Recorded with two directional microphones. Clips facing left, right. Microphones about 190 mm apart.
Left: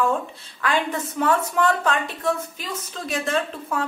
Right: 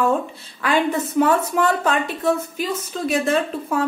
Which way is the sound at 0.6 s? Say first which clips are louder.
Right 4 dB; 10° right (ahead or behind).